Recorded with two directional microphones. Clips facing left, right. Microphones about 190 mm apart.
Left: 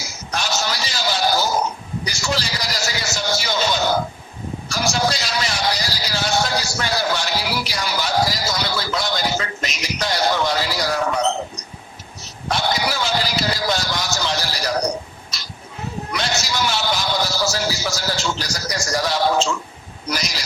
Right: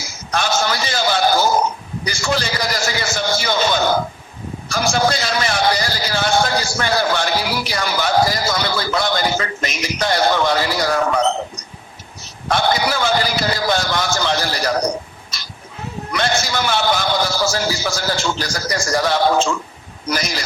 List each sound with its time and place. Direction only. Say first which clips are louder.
0.3 s sheep: right 5 dB; 55° right (ahead or behind)
2.0 s a man's voice: right 5 dB; 55° right (ahead or behind)
12.5 s a man's voice: right 4 dB; 55° right (ahead or behind)
16.1 s a man's voice: right 5 dB; 55° right (ahead or behind)